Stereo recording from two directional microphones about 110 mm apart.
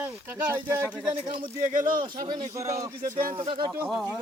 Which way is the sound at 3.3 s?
50° right (ahead or behind).